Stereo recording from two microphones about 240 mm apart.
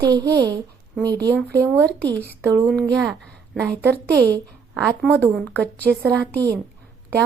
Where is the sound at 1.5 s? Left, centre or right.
Centre.